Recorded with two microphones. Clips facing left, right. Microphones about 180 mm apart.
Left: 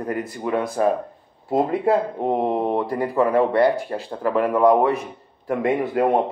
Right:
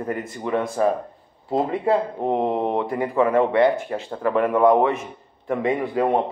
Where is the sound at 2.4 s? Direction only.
15° left (ahead or behind).